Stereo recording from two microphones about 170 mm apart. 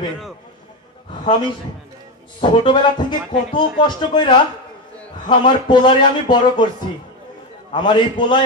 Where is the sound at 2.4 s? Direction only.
25° left (ahead or behind).